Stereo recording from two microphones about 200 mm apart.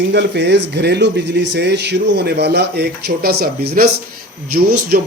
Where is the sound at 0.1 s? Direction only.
60° right (ahead or behind).